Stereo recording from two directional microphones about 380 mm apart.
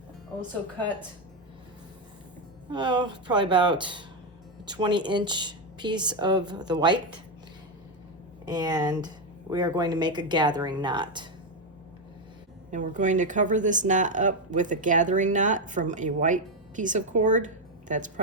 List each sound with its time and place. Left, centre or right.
2.6 s speech: centre
8.4 s speech: centre
12.7 s speech: centre